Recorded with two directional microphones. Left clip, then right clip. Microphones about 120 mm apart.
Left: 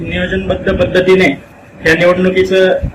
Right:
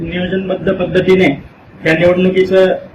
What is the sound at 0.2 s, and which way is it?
Speech, 15° left (ahead or behind).